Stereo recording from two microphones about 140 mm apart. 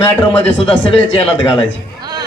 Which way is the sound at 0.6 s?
40° left (ahead or behind).